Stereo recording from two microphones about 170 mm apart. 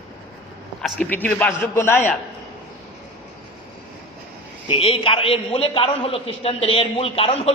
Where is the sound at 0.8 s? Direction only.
5° left (ahead or behind).